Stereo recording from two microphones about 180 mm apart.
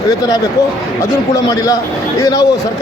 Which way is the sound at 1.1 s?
20° left (ahead or behind).